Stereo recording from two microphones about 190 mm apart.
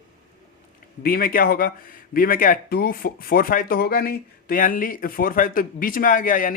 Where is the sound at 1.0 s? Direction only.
50° left (ahead or behind).